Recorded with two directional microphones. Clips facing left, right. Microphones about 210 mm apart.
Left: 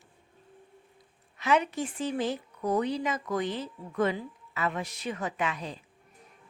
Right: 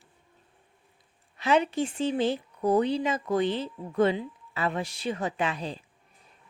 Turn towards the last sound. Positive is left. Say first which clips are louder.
# right 3 dB
turn(degrees=-30)  # may be behind; listen again after turning